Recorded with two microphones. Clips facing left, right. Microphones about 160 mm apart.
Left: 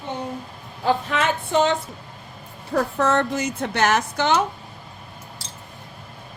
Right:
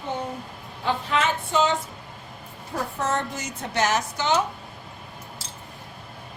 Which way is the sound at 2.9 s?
65° left (ahead or behind).